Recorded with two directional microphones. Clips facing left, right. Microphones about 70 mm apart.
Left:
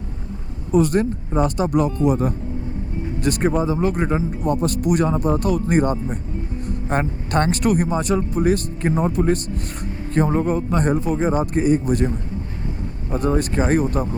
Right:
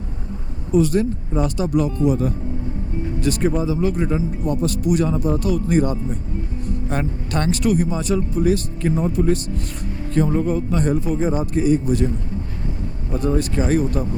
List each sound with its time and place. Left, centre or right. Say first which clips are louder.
0.7 s a man's voice: even; left